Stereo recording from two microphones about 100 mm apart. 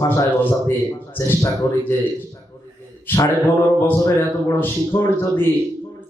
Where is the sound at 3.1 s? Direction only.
20° left (ahead or behind).